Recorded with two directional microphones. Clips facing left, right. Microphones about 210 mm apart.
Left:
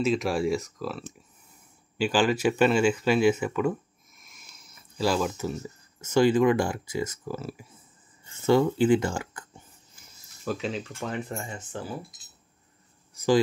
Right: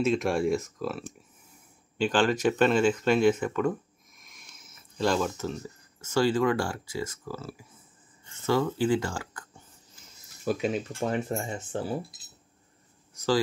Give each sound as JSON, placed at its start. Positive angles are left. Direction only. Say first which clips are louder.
{"t": 0.0, "sound": "speech", "louder": "even", "side_deg": 0}
{"t": 10.4, "sound": "speech", "louder": "right 3 dB", "side_deg": -10}
{"t": 10.8, "sound": "speech", "louder": "right 4 dB", "side_deg": -30}